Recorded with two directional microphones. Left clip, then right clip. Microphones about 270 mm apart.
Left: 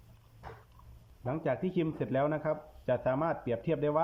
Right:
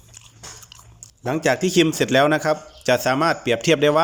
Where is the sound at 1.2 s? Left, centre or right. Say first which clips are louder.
Right 13 dB; right.